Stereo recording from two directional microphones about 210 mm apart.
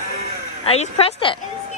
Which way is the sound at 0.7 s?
30° left (ahead or behind).